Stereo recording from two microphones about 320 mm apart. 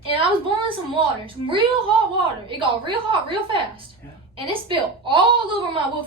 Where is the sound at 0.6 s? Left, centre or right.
Centre.